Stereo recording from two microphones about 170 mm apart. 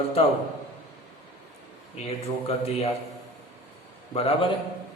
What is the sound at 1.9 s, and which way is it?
Speech, 35° left (ahead or behind).